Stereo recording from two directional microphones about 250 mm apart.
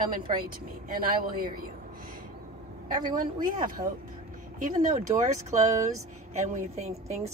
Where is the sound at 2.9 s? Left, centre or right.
Right.